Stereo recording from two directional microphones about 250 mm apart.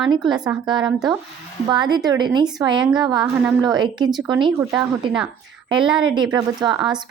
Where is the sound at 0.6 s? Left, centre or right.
Centre.